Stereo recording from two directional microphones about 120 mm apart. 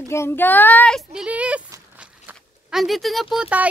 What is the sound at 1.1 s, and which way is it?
Speech, 10° right (ahead or behind).